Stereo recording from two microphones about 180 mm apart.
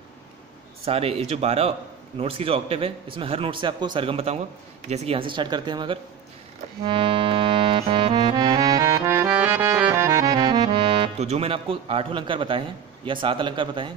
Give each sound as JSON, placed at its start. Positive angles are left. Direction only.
{"t": 0.8, "sound": "a man's voice", "side_deg": -35}
{"t": 6.8, "sound": "accordion", "side_deg": -30}